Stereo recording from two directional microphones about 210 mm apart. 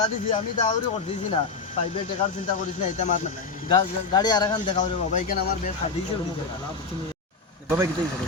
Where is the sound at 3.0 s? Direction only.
35° left (ahead or behind).